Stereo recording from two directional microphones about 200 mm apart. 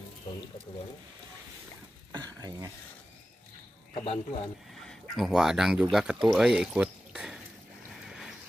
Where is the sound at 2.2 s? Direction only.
20° right (ahead or behind).